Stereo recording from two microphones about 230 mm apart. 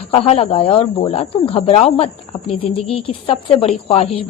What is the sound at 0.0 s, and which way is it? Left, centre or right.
A woman's voice, left.